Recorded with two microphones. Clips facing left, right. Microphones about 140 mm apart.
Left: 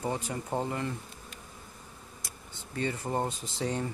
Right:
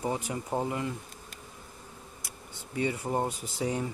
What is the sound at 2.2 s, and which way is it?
Speech, 10° right (ahead or behind).